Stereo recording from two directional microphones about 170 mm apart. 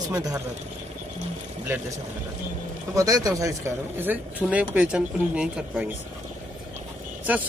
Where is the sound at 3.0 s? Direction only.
20° right (ahead or behind).